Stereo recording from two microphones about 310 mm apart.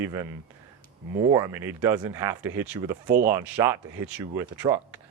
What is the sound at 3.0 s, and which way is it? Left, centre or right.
Speech, right.